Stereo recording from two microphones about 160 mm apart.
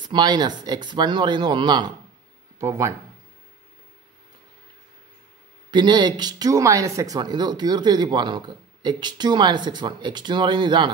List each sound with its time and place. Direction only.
0.0 s speech: 25° right (ahead or behind)
2.6 s speech: 15° right (ahead or behind)
5.7 s speech: 30° right (ahead or behind)